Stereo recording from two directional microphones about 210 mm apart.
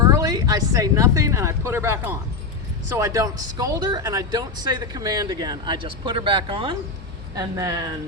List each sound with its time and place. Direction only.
0.0 s speech: 15° right (ahead or behind)